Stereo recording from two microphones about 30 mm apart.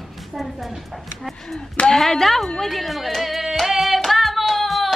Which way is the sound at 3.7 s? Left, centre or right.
Centre.